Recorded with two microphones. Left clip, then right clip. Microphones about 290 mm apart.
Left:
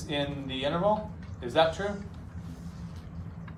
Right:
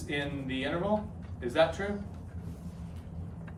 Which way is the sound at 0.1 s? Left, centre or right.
Centre.